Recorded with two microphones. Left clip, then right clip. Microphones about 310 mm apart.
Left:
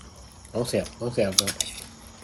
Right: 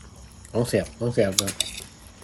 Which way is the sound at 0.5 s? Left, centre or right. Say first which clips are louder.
Right 3 dB; right.